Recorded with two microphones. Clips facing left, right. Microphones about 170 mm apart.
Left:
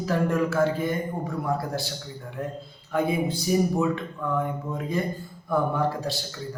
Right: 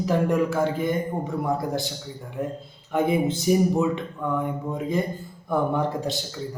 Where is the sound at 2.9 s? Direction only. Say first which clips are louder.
Right 3 dB; 20° right (ahead or behind).